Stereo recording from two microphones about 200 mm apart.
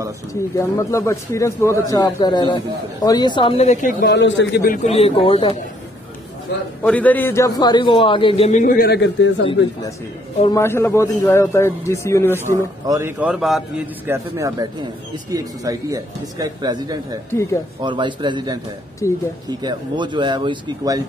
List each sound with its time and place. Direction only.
0.3 s speech: 15° left (ahead or behind); by 3.9 s 35° left (ahead or behind)
4.0 s a man's voice: 60° left (ahead or behind)
4.8 s a man's voice: 30° left (ahead or behind)
6.8 s a man's voice: 5° left (ahead or behind); by 9.5 s 65° left (ahead or behind)
10.5 s speech: 15° left (ahead or behind)
12.4 s a man's voice: 15° right (ahead or behind)
13.2 s a man's voice: 5° right (ahead or behind)
14.0 s a man's voice: 15° right (ahead or behind)
17.3 s speech: 15° left (ahead or behind)
17.8 s speech: 25° right (ahead or behind)
19.0 s speech: 15° left (ahead or behind)
19.6 s speech: 20° right (ahead or behind)